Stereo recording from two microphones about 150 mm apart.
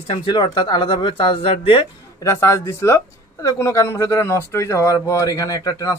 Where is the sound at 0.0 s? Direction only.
35° left (ahead or behind).